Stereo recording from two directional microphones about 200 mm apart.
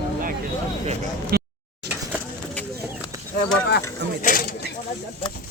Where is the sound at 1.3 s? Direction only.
50° right (ahead or behind).